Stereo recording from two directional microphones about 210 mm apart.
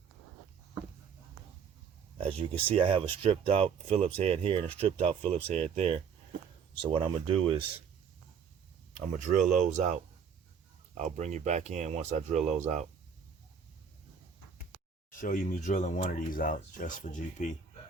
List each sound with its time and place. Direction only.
2.2 s speech: 25° right (ahead or behind)
9.1 s speech: 40° right (ahead or behind)
10.9 s speech: 35° right (ahead or behind)
15.1 s speech: 40° left (ahead or behind)